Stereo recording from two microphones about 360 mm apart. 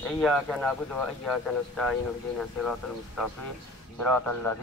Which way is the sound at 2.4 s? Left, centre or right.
Centre.